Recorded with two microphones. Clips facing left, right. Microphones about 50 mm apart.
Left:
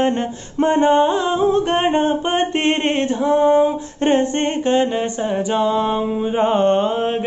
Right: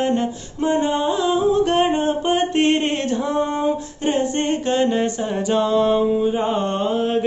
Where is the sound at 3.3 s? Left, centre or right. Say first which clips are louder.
Left 11 dB; centre.